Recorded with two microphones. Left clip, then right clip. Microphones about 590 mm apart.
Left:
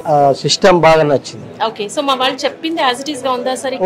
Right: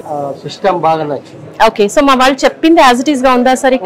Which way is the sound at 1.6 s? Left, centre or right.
Right.